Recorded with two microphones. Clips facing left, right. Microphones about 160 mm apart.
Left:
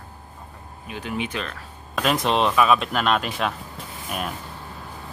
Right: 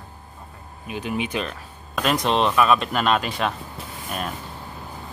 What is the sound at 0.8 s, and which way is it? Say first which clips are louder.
Speech: right 2 dB; 15° right (ahead or behind).